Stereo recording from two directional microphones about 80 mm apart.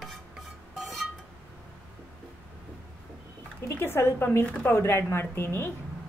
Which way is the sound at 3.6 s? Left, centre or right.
Left.